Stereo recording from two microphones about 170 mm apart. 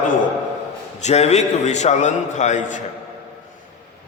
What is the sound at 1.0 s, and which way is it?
A man's voice, 40° left (ahead or behind).